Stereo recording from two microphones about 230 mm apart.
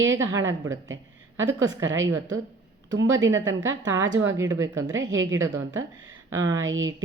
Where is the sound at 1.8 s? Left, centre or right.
Right.